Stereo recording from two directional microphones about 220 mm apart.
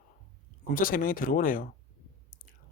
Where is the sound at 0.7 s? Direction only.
40° left (ahead or behind).